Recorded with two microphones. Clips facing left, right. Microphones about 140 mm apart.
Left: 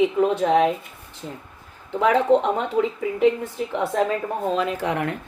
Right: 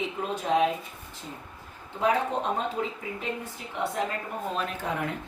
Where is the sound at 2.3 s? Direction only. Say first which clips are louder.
Left 13 dB; 90° left.